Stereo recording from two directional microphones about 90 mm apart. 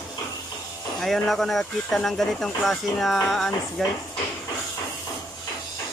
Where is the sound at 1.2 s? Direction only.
Centre (ahead or behind).